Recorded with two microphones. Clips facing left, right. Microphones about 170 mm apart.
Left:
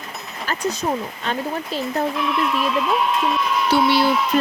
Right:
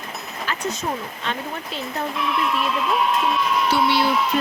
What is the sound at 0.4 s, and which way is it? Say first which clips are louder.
Speech: left 4 dB; 35° left (ahead or behind).